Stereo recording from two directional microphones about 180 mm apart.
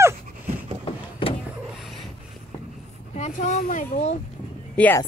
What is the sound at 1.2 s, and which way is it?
Vehicle, 30° left (ahead or behind).